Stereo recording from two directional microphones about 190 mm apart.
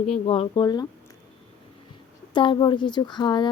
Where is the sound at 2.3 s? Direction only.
25° left (ahead or behind).